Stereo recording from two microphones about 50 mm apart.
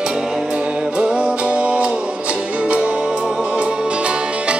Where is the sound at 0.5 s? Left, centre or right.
Centre.